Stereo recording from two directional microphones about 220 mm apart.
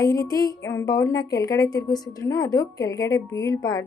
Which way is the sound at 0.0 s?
15° left (ahead or behind).